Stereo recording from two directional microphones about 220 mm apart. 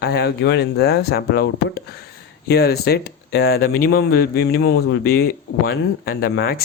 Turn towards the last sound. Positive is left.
turn(degrees=45)  # may be behind; listen again after turning